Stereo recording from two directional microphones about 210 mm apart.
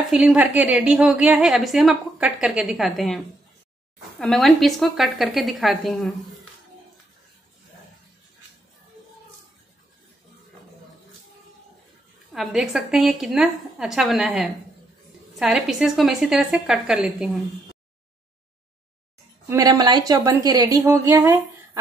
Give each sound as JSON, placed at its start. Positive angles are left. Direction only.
{"t": 0.1, "sound": "a woman's voice", "side_deg": -5}
{"t": 4.2, "sound": "a woman's voice", "side_deg": 0}
{"t": 12.3, "sound": "a woman's voice", "side_deg": 0}
{"t": 19.5, "sound": "speech", "side_deg": -20}